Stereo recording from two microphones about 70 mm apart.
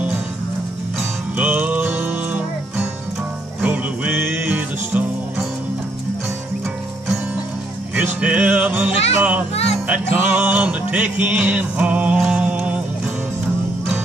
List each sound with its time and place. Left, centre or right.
1.3 s music: right
3.6 s music: right
7.9 s speech: centre